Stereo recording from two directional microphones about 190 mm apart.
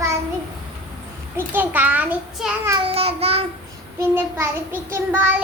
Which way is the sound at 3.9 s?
15° right (ahead or behind).